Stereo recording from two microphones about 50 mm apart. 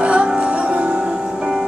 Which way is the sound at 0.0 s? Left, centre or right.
Right.